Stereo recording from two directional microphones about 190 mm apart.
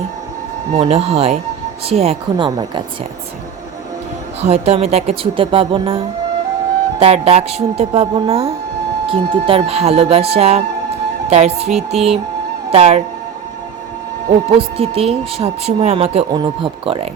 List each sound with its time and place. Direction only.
0.7 s speech: 35° right (ahead or behind)
4.4 s speech: 35° right (ahead or behind)
7.0 s speech: 30° right (ahead or behind)
14.5 s speech: 30° right (ahead or behind)